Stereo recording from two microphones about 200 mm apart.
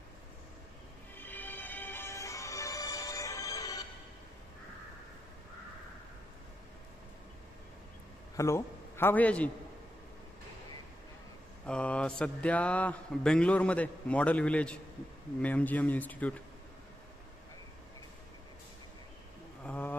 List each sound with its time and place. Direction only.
1.1 s music: 10° left (ahead or behind)
8.4 s a man's voice: 15° left (ahead or behind)
11.6 s speech: 5° left (ahead or behind)
19.6 s wild animals: 10° left (ahead or behind)